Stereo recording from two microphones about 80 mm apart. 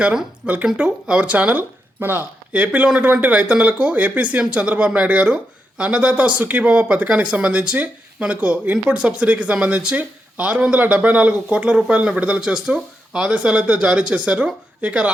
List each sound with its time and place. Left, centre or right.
0.0 s speech: centre
0.4 s speech: centre
2.5 s speech: centre